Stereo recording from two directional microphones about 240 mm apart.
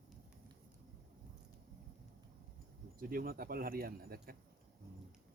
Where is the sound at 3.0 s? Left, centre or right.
Right.